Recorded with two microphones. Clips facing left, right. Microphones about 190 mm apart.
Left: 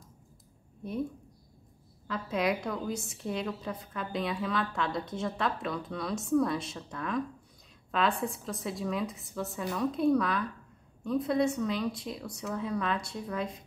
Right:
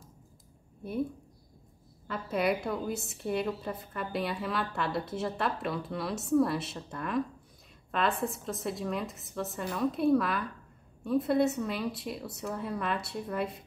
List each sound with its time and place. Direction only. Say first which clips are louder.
2.0 s a woman's voice: right 1 dB; 5° right (ahead or behind)